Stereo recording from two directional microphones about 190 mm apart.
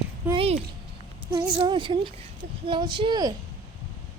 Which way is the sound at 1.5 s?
25° right (ahead or behind).